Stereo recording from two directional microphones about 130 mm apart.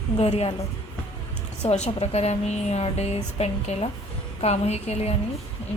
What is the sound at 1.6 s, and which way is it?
A woman's voice, 60° left (ahead or behind).